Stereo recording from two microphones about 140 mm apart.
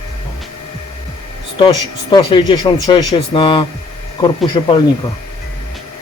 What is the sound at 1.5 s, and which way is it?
Speech, 35° left (ahead or behind).